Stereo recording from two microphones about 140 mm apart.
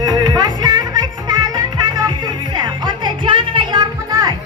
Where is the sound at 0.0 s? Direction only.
30° right (ahead or behind).